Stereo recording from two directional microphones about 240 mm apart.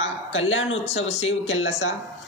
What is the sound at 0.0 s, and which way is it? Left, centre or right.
A woman's voice, left.